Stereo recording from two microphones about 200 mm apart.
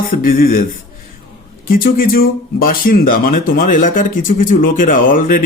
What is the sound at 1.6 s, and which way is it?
Speech, 45° left (ahead or behind).